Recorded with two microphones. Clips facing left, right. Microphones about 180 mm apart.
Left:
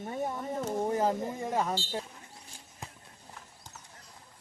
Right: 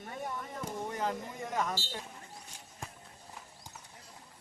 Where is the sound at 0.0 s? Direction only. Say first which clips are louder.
Left 6 dB; 30° left (ahead or behind).